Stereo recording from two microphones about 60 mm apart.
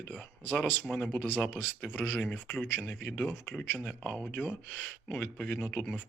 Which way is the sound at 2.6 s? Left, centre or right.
Left.